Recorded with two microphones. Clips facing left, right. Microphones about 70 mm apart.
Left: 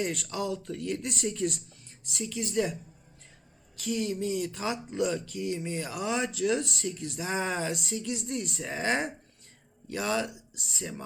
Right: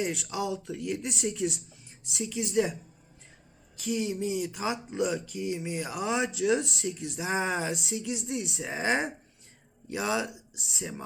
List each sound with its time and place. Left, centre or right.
0.0 s speech: centre
3.8 s speech: centre
6.8 s speech: centre
7.2 s speech: centre
7.7 s speech: centre
8.5 s speech: centre
10.2 s speech: centre